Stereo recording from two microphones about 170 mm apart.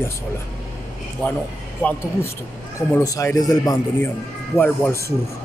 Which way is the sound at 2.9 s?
20° left (ahead or behind).